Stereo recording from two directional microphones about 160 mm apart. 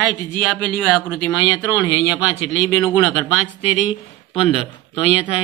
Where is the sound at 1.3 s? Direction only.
20° left (ahead or behind).